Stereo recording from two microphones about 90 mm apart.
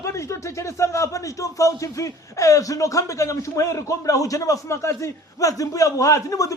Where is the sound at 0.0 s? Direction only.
35° left (ahead or behind).